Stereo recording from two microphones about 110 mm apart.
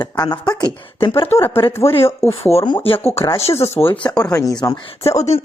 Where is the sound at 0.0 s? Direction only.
40° left (ahead or behind).